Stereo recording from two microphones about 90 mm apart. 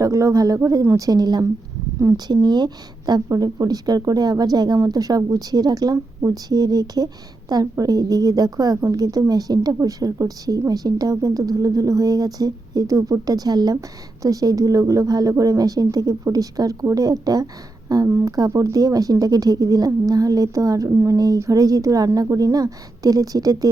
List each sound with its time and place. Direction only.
0.0 s a woman's voice: 35° right (ahead or behind)
18.1 s a woman's voice: 30° right (ahead or behind)